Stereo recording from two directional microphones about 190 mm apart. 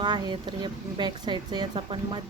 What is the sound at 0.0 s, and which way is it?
Speech, 25° right (ahead or behind).